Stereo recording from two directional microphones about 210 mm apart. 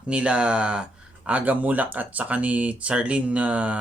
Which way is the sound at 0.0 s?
5° right (ahead or behind).